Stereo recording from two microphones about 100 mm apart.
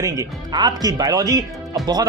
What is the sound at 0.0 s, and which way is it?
Speech, 35° right (ahead or behind).